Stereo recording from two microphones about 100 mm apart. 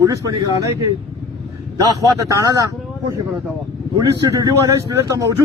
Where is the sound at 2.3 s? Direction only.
40° right (ahead or behind).